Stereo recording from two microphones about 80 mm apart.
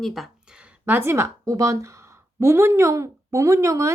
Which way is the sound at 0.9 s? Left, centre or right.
Right.